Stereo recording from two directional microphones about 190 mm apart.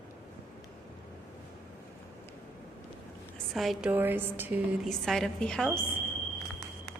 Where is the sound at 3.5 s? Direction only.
Centre (ahead or behind).